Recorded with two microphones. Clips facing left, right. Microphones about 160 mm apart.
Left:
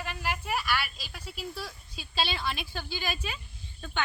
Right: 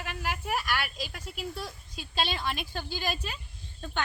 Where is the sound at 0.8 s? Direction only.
50° right (ahead or behind).